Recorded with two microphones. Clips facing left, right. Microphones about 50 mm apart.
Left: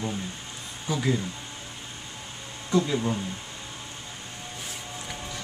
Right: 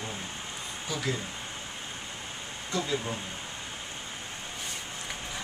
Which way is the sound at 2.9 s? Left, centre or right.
Centre.